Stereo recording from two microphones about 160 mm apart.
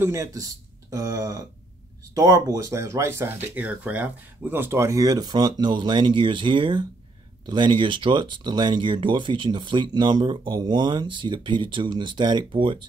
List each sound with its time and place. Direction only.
0.0 s speech: 15° right (ahead or behind)